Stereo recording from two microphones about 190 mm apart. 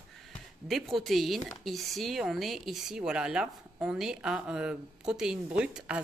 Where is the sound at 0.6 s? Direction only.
Centre (ahead or behind).